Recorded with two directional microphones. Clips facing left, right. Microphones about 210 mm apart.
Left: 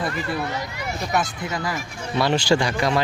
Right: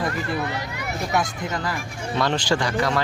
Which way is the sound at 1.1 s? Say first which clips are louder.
Even; 10° left (ahead or behind).